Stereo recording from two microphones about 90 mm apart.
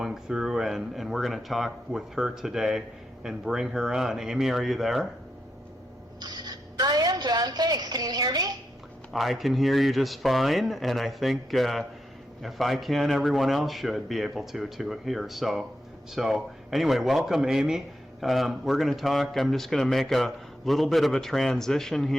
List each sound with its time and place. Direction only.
0.0 s speech: 5° right (ahead or behind)
6.1 s a sound: 50° right (ahead or behind)
9.1 s speech: centre (ahead or behind)